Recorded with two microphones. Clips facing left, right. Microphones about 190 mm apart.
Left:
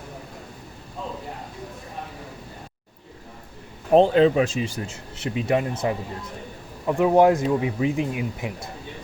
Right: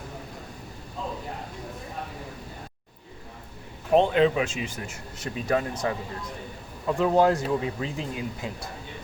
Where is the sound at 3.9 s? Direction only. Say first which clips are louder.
Left 4 dB; 35° left (ahead or behind).